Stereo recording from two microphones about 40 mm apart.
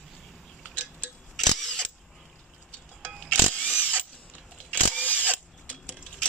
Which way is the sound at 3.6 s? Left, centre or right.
Right.